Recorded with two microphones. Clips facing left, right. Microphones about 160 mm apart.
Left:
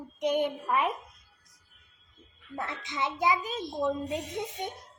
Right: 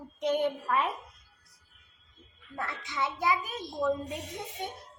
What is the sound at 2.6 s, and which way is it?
A child's voice, 20° left (ahead or behind).